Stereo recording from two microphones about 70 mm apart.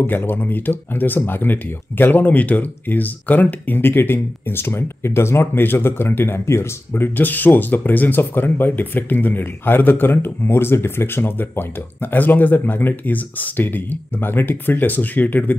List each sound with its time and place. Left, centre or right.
0.0 s speech: left